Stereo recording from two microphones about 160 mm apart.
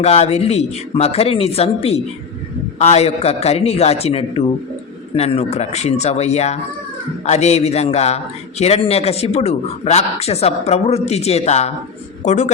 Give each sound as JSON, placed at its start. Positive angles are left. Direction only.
{"t": 0.0, "sound": "a man's voice", "side_deg": 40}